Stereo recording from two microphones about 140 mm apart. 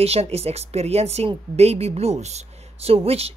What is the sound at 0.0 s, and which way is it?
Speech, 45° right (ahead or behind).